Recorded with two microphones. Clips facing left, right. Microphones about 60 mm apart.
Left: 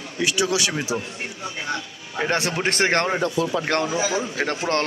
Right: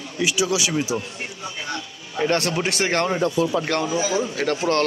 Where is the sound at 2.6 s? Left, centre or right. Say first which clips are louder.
Left 1 dB; left.